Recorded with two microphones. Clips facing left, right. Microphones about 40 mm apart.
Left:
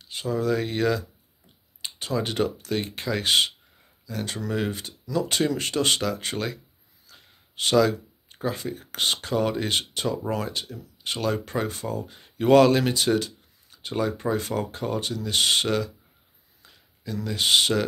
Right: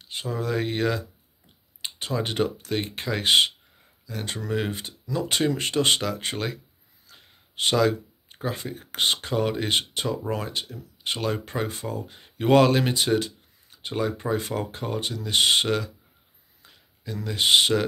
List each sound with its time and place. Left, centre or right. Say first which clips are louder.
0.0 s speech: left 3 dB; right
7.1 s a sound: even; right
7.7 s speech: left 2 dB; centre